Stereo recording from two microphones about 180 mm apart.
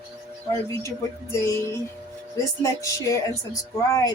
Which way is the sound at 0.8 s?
15° left (ahead or behind).